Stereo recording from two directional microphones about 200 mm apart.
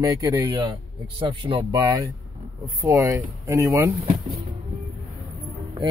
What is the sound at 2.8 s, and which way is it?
Speech, 15° right (ahead or behind).